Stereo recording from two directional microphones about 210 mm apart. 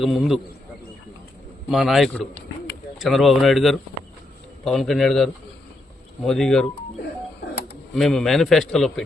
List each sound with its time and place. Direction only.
0.0 s a man's voice: centre (ahead or behind)
1.7 s a man's voice: centre (ahead or behind)
7.9 s a man's voice: centre (ahead or behind)